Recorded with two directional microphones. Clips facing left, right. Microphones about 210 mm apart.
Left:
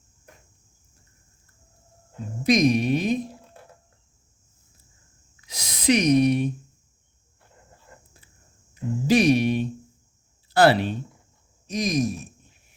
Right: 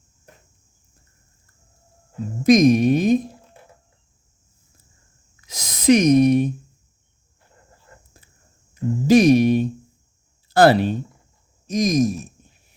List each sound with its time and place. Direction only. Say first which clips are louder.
2.4 s speech: right 6 dB; 45° right (ahead or behind)
5.5 s a sound: right 6 dB; 45° right (ahead or behind)
9.0 s speech: right 6 dB; 45° right (ahead or behind)